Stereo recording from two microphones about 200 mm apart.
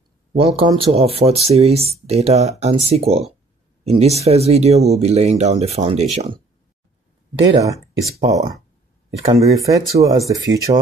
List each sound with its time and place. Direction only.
0.3 s speech: 30° right (ahead or behind)
7.6 s speech: 15° right (ahead or behind)